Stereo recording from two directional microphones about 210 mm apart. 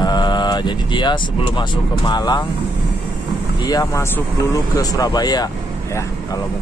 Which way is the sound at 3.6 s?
15° left (ahead or behind).